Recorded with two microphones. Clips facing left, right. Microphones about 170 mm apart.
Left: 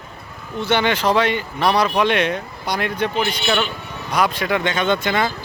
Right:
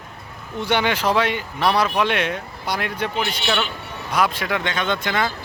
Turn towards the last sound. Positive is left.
turn(degrees=5)  # may be behind; listen again after turning